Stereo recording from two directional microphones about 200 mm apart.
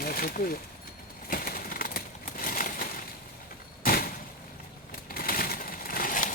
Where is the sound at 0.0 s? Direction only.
45° left (ahead or behind).